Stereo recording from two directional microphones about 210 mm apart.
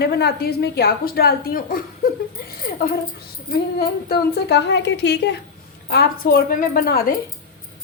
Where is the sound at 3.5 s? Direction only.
50° left (ahead or behind).